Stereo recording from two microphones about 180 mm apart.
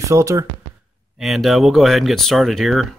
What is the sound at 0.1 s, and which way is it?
Speech, 15° right (ahead or behind).